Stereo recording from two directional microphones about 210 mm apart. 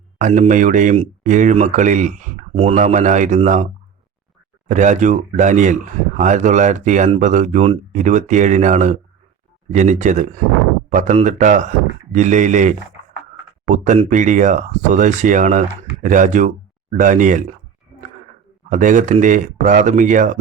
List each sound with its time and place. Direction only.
0.2 s speech: 35° right (ahead or behind)
4.7 s speech: 35° right (ahead or behind)
18.7 s speech: 35° right (ahead or behind)